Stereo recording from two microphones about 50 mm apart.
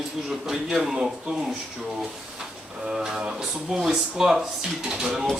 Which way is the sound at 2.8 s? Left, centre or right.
Centre.